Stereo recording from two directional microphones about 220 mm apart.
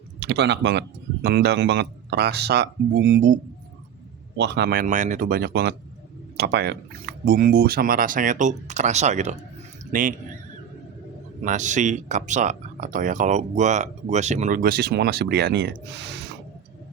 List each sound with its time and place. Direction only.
0.2 s speech: 50° right (ahead or behind)
4.4 s speech: 50° right (ahead or behind); by 10.2 s 35° right (ahead or behind)
11.4 s speech: 35° right (ahead or behind); by 16.4 s 50° right (ahead or behind)